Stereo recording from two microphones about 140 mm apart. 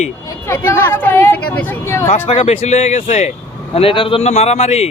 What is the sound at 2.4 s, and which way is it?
Speech, 50° left (ahead or behind).